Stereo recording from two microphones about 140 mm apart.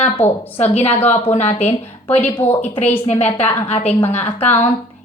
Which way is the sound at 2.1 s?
15° left (ahead or behind).